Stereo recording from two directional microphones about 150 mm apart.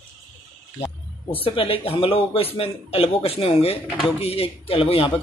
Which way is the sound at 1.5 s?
35° left (ahead or behind).